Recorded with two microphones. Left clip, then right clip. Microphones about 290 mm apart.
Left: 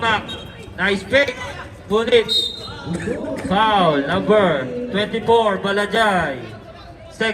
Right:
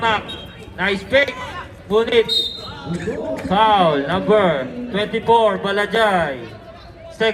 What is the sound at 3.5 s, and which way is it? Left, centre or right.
A man's voice, right.